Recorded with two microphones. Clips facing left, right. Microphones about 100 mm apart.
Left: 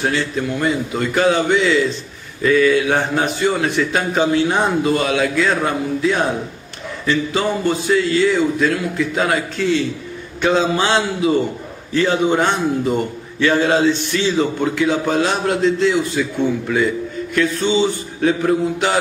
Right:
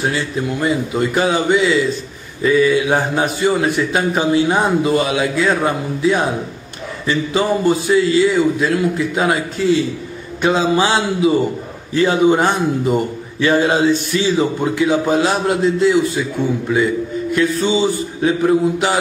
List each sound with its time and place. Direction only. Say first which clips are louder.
0.1 s a man's voice: even; 15° right (ahead or behind)
10.4 s a man's voice: right 1 dB; 10° right (ahead or behind)